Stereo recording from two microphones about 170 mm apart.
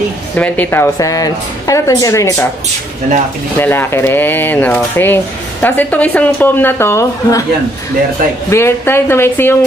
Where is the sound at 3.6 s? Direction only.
15° left (ahead or behind).